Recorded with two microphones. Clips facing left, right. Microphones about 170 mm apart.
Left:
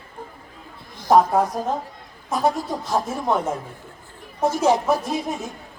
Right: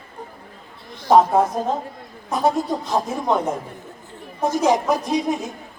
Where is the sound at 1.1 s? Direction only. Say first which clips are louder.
Right 2 dB; 20° right (ahead or behind).